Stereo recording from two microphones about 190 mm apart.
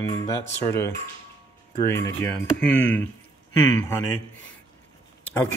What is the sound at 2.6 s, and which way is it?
Speech, 80° left.